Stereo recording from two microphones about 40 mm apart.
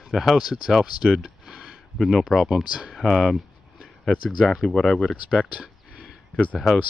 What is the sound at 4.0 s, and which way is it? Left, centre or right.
Speech, centre.